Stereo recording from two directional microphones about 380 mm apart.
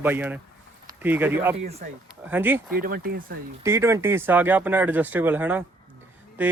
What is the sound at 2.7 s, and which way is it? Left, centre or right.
Speech, right.